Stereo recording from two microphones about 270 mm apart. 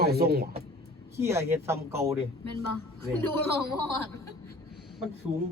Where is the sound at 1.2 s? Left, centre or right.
Centre.